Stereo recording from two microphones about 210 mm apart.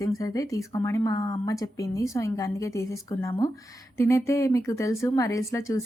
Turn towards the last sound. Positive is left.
turn(degrees=15)  # may be behind; listen again after turning